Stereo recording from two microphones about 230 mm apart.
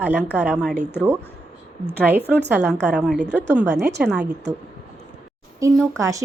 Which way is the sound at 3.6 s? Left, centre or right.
Right.